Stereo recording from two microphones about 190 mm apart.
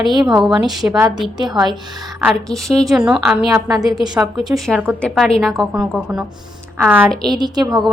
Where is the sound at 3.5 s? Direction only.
20° right (ahead or behind).